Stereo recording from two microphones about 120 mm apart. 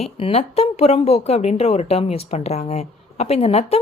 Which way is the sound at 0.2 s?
55° left (ahead or behind).